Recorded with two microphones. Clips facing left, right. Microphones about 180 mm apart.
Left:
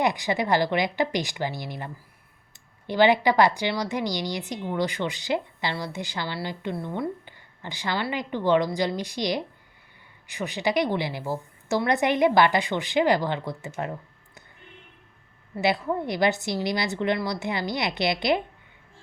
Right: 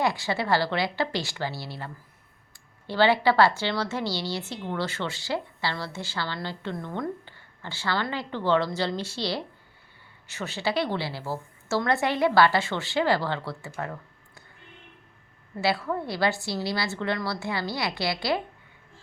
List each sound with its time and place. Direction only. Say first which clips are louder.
0.0 s a woman's voice: left 2 dB; 15° left (ahead or behind)
15.5 s a woman's voice: left 2 dB; 20° left (ahead or behind)